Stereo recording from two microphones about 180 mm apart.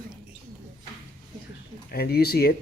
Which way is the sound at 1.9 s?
60° left (ahead or behind).